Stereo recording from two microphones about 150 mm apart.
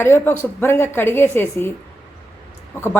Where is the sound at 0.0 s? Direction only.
15° left (ahead or behind).